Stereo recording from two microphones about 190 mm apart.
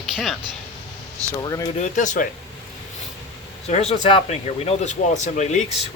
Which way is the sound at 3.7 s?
35° left (ahead or behind).